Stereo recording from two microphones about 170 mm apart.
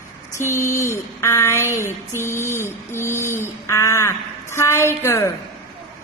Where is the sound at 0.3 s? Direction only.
15° left (ahead or behind).